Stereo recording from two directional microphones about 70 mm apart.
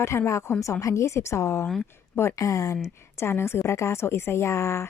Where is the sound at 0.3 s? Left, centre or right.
Left.